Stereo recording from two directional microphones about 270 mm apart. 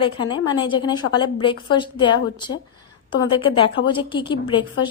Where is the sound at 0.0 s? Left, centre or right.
Centre.